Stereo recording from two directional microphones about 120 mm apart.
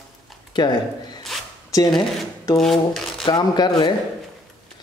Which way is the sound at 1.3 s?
Centre (ahead or behind).